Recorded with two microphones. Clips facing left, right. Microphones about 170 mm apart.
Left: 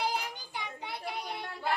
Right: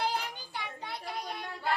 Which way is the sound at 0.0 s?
15° left (ahead or behind).